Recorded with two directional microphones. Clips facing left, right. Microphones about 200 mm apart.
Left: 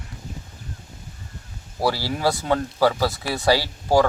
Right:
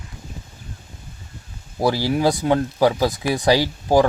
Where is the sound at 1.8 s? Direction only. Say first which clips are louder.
Right 4 dB; 15° right (ahead or behind).